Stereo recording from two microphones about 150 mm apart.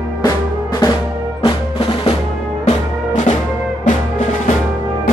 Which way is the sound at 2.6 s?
55° left (ahead or behind).